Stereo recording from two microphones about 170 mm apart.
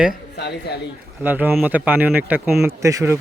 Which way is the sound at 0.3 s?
75° left (ahead or behind).